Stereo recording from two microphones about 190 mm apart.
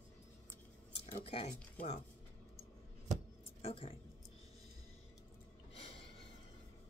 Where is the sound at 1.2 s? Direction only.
30° left (ahead or behind).